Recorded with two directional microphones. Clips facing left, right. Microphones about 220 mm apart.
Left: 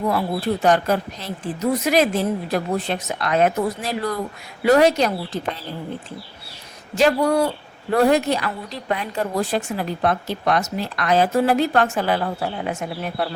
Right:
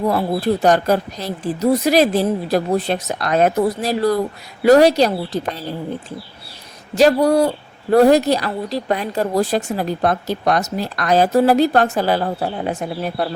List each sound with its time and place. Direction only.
0.1 s a woman's voice: 40° right (ahead or behind)
6.9 s a woman's voice: 40° right (ahead or behind)